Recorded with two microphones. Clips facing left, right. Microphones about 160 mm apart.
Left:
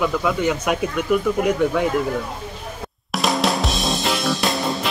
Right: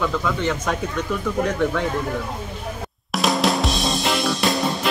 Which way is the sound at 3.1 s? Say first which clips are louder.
Even; centre (ahead or behind).